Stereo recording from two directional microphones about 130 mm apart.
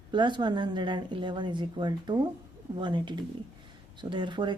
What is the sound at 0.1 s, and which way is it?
Speech, 35° right (ahead or behind).